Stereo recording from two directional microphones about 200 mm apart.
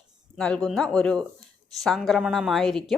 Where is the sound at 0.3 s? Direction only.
5° left (ahead or behind).